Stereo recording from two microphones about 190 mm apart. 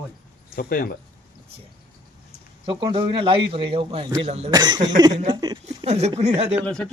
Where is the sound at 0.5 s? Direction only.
50° left (ahead or behind).